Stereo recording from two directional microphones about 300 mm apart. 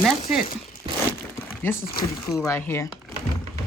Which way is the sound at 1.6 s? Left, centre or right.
Centre.